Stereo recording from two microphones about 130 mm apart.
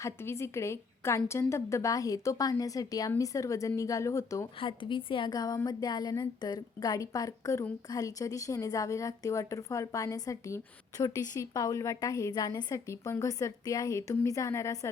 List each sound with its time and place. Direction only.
0.0 s a woman's voice: 20° left (ahead or behind)
4.6 s a woman's voice: 40° left (ahead or behind); by 14.8 s 25° left (ahead or behind)